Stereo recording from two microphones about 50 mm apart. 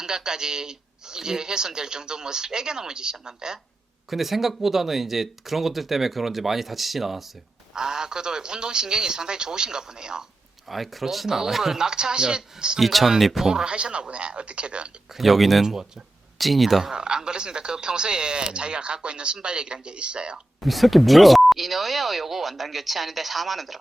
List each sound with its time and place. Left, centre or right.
0.0 s speech: centre
7.7 s speech: centre
10.7 s speech: centre
12.8 s speech: centre
13.5 s speech: centre
15.1 s speech: centre
15.6 s speech: centre
16.4 s speech: centre
16.9 s speech: centre
20.6 s speech: centre